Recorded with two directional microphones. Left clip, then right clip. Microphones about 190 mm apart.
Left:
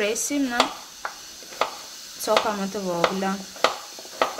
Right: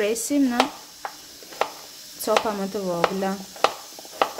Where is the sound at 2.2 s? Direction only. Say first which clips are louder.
Even; 25° right (ahead or behind).